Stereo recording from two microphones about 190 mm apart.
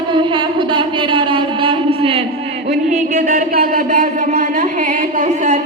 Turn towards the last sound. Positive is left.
turn(degrees=-40)  # may be behind; listen again after turning